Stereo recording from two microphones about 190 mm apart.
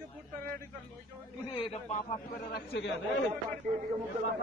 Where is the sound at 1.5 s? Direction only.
30° left (ahead or behind).